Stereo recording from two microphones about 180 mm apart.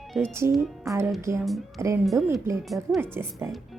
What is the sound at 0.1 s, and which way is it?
Speech, 5° left (ahead or behind).